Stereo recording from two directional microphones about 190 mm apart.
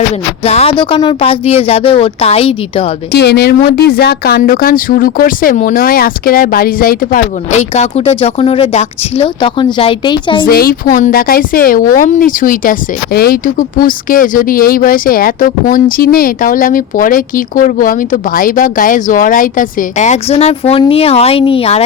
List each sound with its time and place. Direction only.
0.4 s a woman's voice: 35° left (ahead or behind)
3.1 s speech: 60° left (ahead or behind); by 10.4 s 25° left (ahead or behind)
10.4 s speech: 50° left (ahead or behind); by 21.8 s 30° left (ahead or behind)